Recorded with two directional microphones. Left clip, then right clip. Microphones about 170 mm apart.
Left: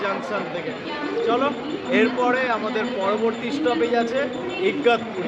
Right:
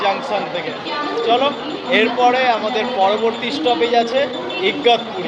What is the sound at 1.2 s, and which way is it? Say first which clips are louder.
Speech: right 6 dB; 20° left (ahead or behind).